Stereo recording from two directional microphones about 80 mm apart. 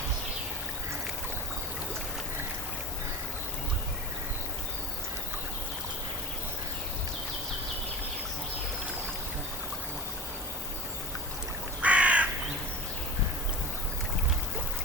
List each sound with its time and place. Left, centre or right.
11.8 s crow: centre